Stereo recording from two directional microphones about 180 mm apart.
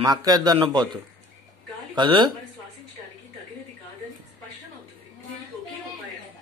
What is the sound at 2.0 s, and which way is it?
Speech, 25° right (ahead or behind).